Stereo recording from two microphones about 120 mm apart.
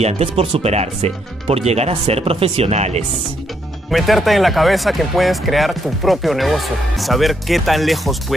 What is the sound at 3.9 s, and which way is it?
Speech, centre (ahead or behind).